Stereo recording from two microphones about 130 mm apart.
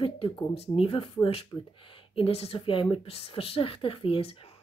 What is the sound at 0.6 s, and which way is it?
Speech, 45° left (ahead or behind).